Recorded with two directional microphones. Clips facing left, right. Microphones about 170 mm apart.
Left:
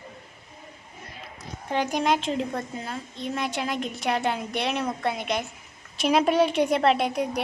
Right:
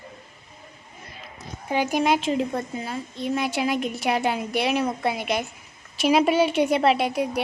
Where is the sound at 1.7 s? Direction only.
5° right (ahead or behind).